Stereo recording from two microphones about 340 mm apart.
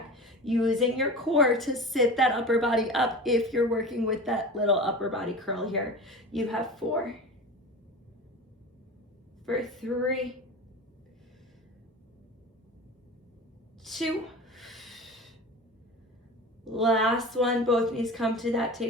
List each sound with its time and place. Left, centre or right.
0.1 s a woman's voice: centre
9.5 s a woman's voice: centre
13.8 s a sound: centre
16.6 s a woman's voice: centre